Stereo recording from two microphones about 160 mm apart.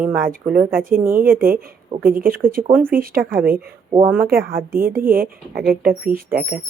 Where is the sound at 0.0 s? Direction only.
10° right (ahead or behind).